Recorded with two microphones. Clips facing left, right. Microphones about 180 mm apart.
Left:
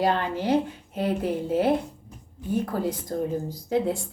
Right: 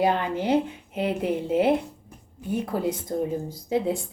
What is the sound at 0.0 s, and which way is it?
Speech, 15° right (ahead or behind).